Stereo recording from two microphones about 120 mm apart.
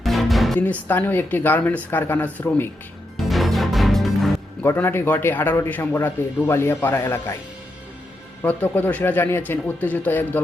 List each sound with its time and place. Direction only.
0.0 s music: centre (ahead or behind)
0.6 s speech: 15° left (ahead or behind)
3.2 s music: centre (ahead or behind)
4.6 s speech: 20° left (ahead or behind)
8.4 s speech: 15° left (ahead or behind)